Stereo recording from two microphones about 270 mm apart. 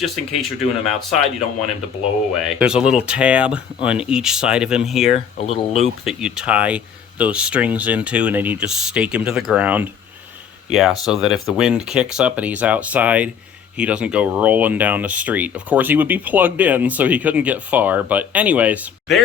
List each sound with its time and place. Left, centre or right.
0.0 s speech: centre
2.4 s speech: centre
5.1 s speech: left
6.1 s speech: centre